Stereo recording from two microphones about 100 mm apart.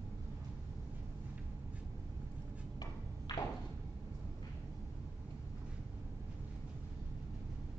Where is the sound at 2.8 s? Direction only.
40° left (ahead or behind).